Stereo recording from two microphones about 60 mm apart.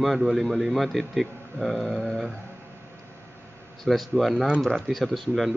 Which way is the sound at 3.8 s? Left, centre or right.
Centre.